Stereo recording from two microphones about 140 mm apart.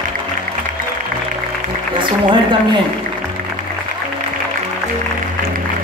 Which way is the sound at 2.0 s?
35° right (ahead or behind).